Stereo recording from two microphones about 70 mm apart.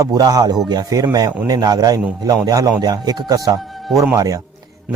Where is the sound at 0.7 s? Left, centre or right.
Right.